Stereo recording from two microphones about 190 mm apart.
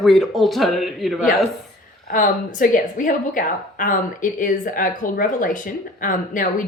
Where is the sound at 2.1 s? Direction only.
45° left (ahead or behind).